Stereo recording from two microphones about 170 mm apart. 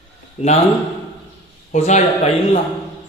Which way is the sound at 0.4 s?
40° left (ahead or behind).